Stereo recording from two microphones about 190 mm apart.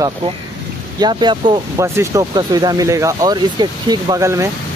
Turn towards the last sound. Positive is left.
turn(degrees=-15)  # may be behind; listen again after turning